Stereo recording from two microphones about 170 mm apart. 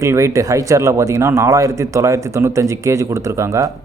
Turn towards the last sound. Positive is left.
turn(degrees=-20)  # may be behind; listen again after turning